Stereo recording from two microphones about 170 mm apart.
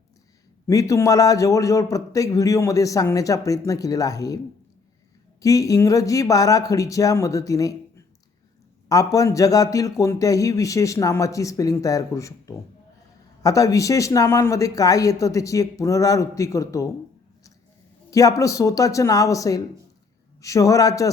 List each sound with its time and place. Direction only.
0.7 s a man's voice: 20° left (ahead or behind)
5.4 s a man's voice: 20° left (ahead or behind)
18.1 s a man's voice: 20° left (ahead or behind)